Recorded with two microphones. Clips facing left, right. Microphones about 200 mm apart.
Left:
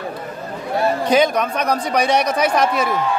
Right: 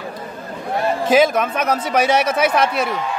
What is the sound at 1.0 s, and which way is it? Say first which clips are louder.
Speech: right 3 dB; 5° right (ahead or behind).